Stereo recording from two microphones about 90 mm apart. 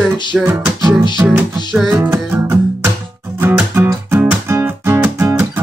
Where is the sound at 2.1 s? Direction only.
30° right (ahead or behind).